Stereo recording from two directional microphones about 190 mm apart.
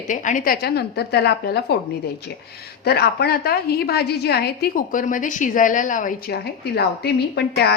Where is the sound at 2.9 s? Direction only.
55° left (ahead or behind).